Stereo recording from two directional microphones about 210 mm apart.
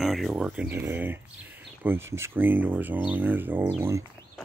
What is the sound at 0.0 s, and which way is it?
Speech, centre (ahead or behind).